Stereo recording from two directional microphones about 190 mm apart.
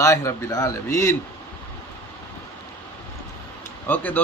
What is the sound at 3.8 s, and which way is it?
Speech, 10° left (ahead or behind).